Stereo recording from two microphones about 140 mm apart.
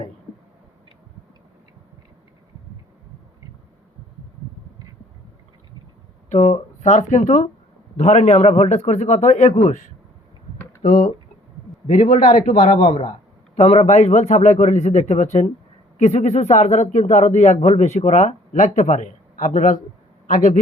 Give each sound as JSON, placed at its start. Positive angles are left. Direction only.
{"t": 6.3, "sound": "a man's voice", "side_deg": 50}
{"t": 12.0, "sound": "a man's voice", "side_deg": 75}
{"t": 12.7, "sound": "speech", "side_deg": 35}
{"t": 13.6, "sound": "a man's voice", "side_deg": 50}